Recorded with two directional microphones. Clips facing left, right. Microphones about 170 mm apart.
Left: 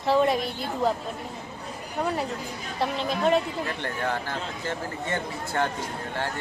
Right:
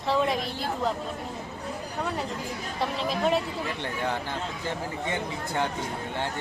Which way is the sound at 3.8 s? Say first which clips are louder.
Even; 15° right (ahead or behind).